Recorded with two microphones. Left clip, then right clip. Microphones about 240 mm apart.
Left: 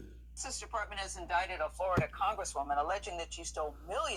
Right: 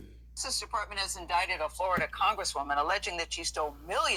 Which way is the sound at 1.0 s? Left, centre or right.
Right.